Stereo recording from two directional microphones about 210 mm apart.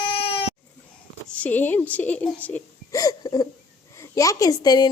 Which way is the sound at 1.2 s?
5° left (ahead or behind).